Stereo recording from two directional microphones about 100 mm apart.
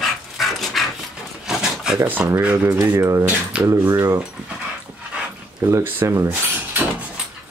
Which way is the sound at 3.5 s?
10° right (ahead or behind).